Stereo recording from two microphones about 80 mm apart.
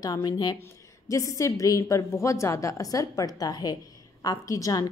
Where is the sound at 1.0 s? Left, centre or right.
Left.